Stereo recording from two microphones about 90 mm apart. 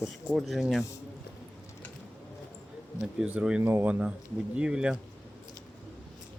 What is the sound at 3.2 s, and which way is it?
Speech, 10° right (ahead or behind).